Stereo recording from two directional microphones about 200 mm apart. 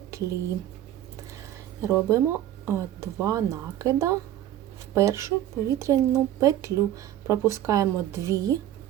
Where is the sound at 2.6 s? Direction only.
15° right (ahead or behind).